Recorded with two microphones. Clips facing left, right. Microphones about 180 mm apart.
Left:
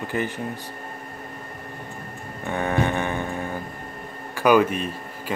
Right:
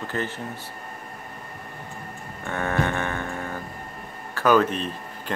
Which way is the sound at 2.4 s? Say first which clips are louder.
Left 2 dB; 15° left (ahead or behind).